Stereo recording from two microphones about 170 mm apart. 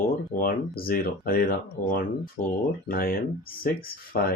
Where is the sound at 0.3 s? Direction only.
60° left (ahead or behind).